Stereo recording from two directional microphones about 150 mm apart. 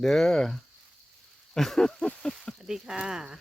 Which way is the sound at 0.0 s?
Centre (ahead or behind).